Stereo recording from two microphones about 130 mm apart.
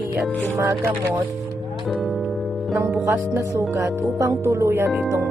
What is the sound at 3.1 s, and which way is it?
Speech, 25° right (ahead or behind).